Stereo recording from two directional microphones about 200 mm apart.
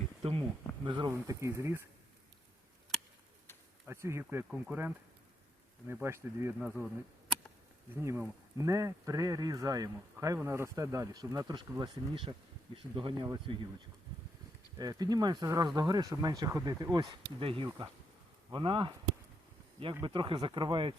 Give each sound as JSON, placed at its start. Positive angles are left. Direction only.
{"t": 0.2, "sound": "speech", "side_deg": -30}
{"t": 3.8, "sound": "speech", "side_deg": -15}
{"t": 8.0, "sound": "speech", "side_deg": -15}
{"t": 14.8, "sound": "speech", "side_deg": -20}